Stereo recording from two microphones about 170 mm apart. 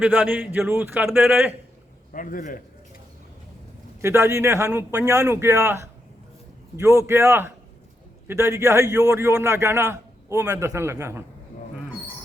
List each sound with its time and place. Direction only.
0.0 s a man's voice: 10° right (ahead or behind)
2.1 s a man's voice: 50° left (ahead or behind)
4.0 s a man's voice: 15° right (ahead or behind)